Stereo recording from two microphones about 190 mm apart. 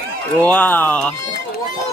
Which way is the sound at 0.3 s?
10° left (ahead or behind).